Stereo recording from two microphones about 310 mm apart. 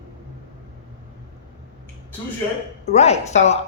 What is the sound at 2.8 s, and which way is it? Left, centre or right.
Speech, left.